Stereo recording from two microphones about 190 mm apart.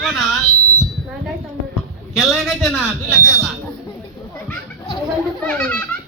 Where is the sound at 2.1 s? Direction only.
Centre (ahead or behind).